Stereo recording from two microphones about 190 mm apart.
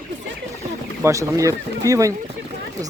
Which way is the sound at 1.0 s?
15° right (ahead or behind).